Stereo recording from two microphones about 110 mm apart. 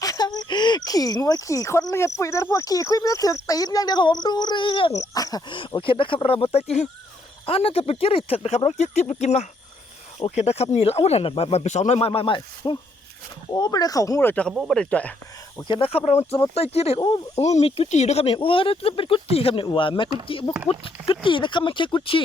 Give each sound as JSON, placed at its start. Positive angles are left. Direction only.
{"t": 0.0, "sound": "speech", "side_deg": 35}
{"t": 4.9, "sound": "speech", "side_deg": 35}
{"t": 5.5, "sound": "speech", "side_deg": 50}
{"t": 7.4, "sound": "speech", "side_deg": 60}
{"t": 13.6, "sound": "speech", "side_deg": 35}
{"t": 14.2, "sound": "speech", "side_deg": 20}
{"t": 14.5, "sound": "speech", "side_deg": -5}
{"t": 14.8, "sound": "speech", "side_deg": 10}
{"t": 15.6, "sound": "speech", "side_deg": 50}
{"t": 17.3, "sound": "speech", "side_deg": 80}
{"t": 18.3, "sound": "speech", "side_deg": 55}
{"t": 19.6, "sound": "speech", "side_deg": 45}